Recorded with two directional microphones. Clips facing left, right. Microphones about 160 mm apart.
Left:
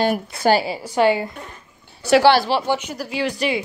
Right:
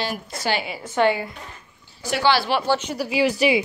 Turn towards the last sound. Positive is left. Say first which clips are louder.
# right 3 dB
turn(degrees=-5)  # may be behind; listen again after turning